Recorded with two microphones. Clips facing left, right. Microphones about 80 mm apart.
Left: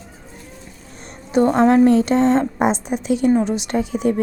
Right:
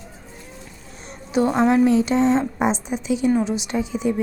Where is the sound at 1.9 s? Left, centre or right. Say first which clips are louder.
Left 3 dB; left.